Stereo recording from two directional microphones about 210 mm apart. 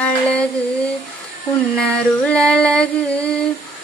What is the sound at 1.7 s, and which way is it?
Female singing, 5° left (ahead or behind).